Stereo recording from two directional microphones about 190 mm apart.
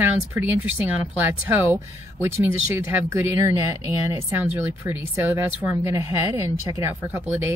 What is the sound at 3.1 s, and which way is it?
Speech, 15° right (ahead or behind).